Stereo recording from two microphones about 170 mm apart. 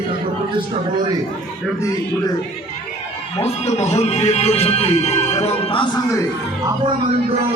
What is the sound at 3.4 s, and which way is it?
Speech, 40° left (ahead or behind).